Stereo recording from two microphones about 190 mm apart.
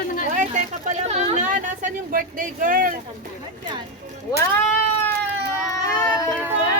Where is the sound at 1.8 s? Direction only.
45° right (ahead or behind).